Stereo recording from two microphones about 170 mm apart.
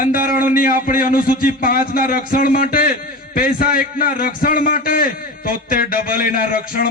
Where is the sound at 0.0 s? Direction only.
55° left (ahead or behind).